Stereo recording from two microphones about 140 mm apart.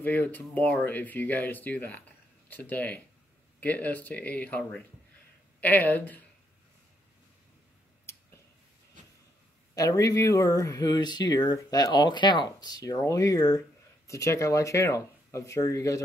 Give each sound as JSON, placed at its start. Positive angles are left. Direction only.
{"t": 0.0, "sound": "speech", "side_deg": 15}
{"t": 9.8, "sound": "speech", "side_deg": 25}